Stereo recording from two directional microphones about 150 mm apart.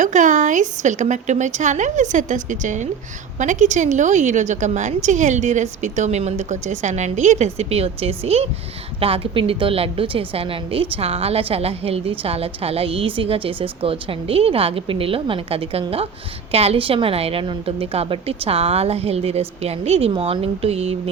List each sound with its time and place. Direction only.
0.0 s a woman's voice: 55° right (ahead or behind)